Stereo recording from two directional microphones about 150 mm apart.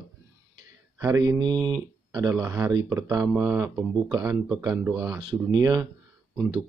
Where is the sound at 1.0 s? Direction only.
20° right (ahead or behind).